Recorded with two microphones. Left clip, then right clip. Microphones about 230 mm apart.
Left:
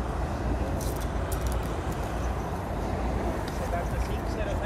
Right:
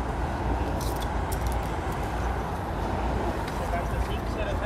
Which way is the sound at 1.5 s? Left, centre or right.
Right.